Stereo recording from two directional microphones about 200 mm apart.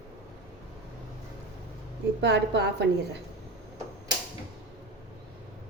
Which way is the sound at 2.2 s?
55° right (ahead or behind).